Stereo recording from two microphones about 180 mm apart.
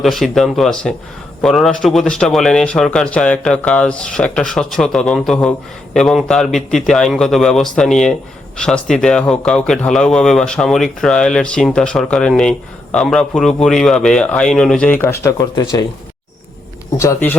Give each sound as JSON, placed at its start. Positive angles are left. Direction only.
{"t": 0.0, "sound": "speech", "side_deg": 0}
{"t": 17.0, "sound": "speech", "side_deg": 15}